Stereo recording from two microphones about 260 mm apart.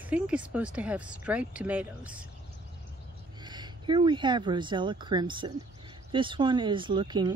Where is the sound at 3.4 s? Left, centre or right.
Centre.